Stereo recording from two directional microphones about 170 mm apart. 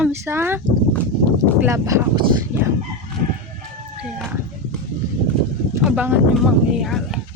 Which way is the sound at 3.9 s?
5° right (ahead or behind).